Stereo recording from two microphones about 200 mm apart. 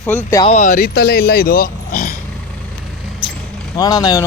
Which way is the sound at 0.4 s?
35° left (ahead or behind).